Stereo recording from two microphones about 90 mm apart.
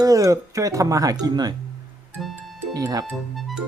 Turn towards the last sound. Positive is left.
turn(degrees=0)  # may be behind; listen again after turning